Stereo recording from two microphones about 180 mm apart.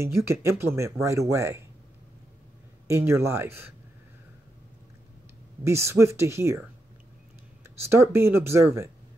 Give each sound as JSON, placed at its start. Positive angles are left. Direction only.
{"t": 0.0, "sound": "speech", "side_deg": -15}
{"t": 2.9, "sound": "speech", "side_deg": -15}
{"t": 5.6, "sound": "speech", "side_deg": -15}
{"t": 7.8, "sound": "speech", "side_deg": -15}